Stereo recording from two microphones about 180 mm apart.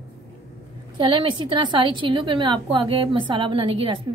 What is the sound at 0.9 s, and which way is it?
A woman's voice, 25° right (ahead or behind).